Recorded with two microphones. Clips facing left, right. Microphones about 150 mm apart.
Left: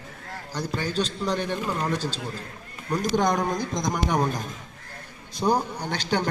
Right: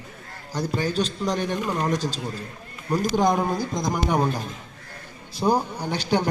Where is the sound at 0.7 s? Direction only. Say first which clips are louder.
Right 2 dB; 10° right (ahead or behind).